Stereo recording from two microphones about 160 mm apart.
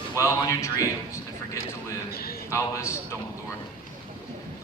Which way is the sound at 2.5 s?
15° left (ahead or behind).